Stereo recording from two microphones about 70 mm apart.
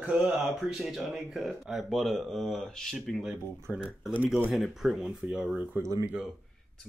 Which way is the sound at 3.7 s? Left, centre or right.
Right.